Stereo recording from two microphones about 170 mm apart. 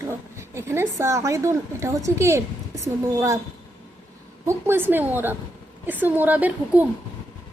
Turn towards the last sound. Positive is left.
turn(degrees=-10)  # may be behind; listen again after turning